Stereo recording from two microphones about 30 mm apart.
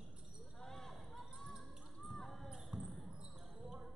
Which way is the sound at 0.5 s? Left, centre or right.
Centre.